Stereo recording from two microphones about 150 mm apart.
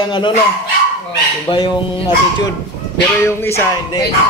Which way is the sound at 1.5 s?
30° left (ahead or behind).